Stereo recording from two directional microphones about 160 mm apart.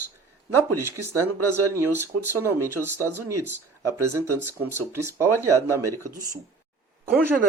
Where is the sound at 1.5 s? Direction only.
15° right (ahead or behind).